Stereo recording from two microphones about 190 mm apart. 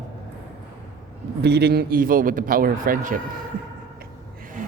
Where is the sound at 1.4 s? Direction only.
60° right (ahead or behind).